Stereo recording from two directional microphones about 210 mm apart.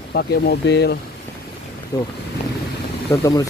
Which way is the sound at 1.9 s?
15° left (ahead or behind).